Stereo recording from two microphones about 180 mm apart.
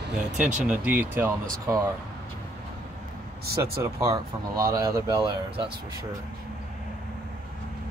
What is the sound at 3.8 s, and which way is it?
Speech, 15° right (ahead or behind).